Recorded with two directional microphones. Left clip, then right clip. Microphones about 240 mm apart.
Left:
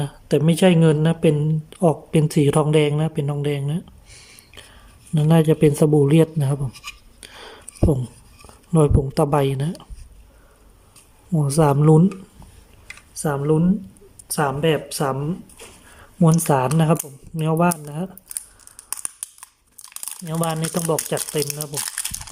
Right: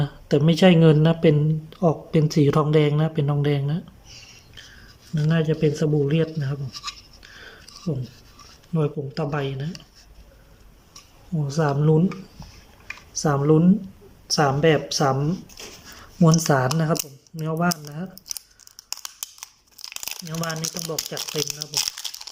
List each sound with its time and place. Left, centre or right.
0.0 s speech: centre
5.1 s speech: centre
7.2 s a sound: left
8.7 s speech: left
11.3 s speech: left
13.2 s speech: centre
16.2 s speech: centre
18.3 s crunch: centre
20.7 s speech: left
21.3 s speech: centre
21.7 s crumpling: centre